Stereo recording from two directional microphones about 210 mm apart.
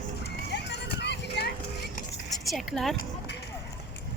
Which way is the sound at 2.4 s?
Centre (ahead or behind).